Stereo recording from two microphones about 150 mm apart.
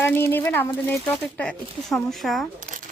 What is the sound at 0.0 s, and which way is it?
Speech, 15° left (ahead or behind).